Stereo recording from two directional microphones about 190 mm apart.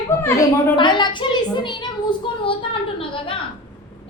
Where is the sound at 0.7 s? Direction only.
25° left (ahead or behind).